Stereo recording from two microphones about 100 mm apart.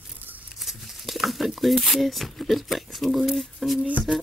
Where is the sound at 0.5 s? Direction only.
Centre (ahead or behind).